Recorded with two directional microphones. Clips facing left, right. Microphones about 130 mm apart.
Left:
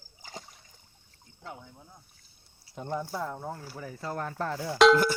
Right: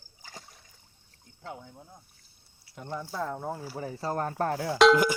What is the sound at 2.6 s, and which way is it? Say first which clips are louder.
Speech: left 3 dB; 25° left (ahead or behind).